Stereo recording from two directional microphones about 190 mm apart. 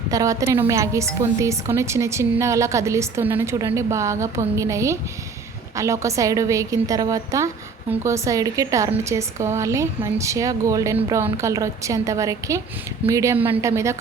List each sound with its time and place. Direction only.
0.1 s a woman's voice: 20° right (ahead or behind)